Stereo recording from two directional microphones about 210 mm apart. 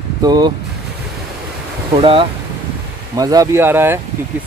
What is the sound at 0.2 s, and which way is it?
Speech, 20° right (ahead or behind).